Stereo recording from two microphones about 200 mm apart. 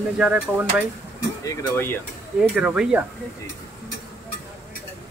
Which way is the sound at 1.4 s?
15° left (ahead or behind).